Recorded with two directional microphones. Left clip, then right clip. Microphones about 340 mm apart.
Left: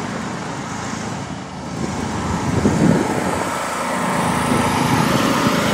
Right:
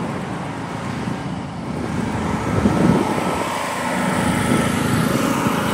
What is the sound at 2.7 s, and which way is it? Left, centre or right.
Vehicle, left.